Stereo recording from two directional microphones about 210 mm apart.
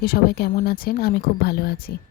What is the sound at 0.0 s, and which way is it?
Speech, 45° left (ahead or behind).